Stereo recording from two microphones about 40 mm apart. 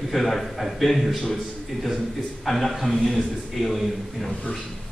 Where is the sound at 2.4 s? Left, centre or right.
Centre.